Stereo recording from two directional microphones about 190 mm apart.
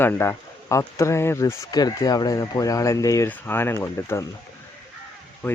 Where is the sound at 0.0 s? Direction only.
10° left (ahead or behind).